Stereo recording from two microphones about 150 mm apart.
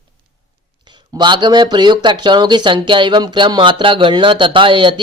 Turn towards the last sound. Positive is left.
turn(degrees=-35)  # may be behind; listen again after turning